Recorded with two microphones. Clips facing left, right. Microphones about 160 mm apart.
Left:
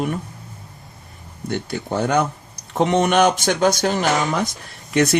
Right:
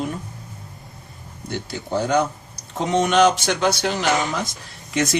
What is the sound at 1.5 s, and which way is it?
Speech, 55° left (ahead or behind).